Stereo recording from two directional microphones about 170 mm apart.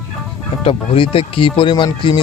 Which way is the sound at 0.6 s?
35° left (ahead or behind).